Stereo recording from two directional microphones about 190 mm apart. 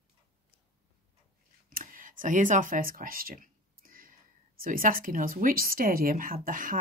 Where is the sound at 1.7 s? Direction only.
45° right (ahead or behind).